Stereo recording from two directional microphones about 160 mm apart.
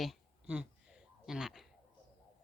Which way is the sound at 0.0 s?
5° right (ahead or behind).